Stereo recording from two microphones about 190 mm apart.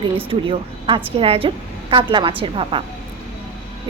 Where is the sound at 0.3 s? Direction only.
30° right (ahead or behind).